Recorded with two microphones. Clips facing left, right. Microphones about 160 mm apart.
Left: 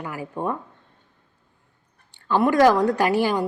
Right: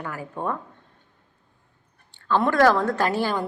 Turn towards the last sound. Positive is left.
turn(degrees=15)  # may be behind; listen again after turning